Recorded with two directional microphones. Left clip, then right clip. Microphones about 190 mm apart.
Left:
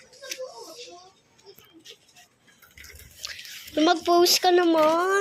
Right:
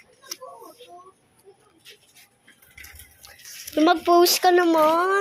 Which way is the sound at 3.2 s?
5° right (ahead or behind).